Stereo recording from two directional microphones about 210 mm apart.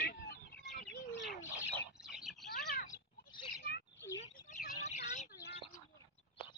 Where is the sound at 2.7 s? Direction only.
45° left (ahead or behind).